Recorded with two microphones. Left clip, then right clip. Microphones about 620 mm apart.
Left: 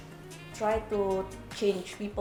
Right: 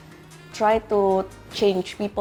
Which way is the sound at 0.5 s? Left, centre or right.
Right.